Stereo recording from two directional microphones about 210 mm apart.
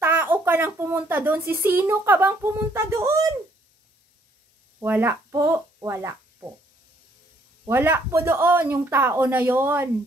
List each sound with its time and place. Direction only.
0.0 s speech: 10° right (ahead or behind)
4.7 s speech: 10° right (ahead or behind)
7.6 s speech: 10° right (ahead or behind)